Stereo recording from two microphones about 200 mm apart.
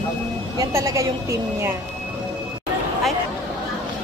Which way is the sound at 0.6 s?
15° right (ahead or behind).